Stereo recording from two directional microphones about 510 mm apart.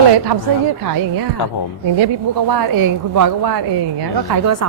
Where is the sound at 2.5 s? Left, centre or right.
Right.